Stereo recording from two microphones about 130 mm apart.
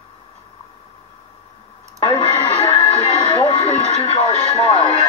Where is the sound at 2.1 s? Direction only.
55° left (ahead or behind).